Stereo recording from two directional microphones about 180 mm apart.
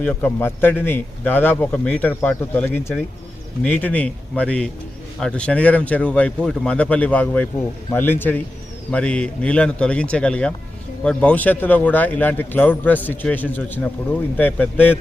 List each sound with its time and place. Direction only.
0.0 s a man's voice: 10° left (ahead or behind)